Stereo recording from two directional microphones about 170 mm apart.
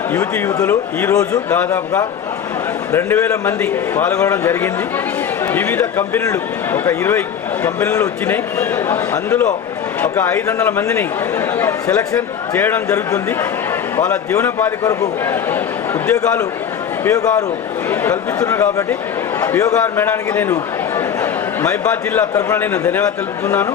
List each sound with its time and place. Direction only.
0.1 s speech: 15° left (ahead or behind)
17.0 s a man's voice: 20° left (ahead or behind)